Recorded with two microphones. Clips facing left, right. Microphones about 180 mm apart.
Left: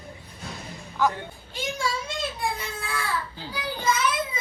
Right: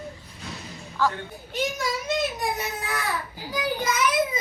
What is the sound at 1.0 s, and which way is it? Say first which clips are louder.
Speech: left 1 dB; 15° left (ahead or behind).